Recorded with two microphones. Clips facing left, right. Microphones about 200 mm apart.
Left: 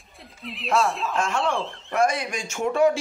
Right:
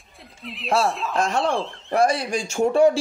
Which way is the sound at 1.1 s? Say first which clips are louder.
Right 4 dB; 35° right (ahead or behind).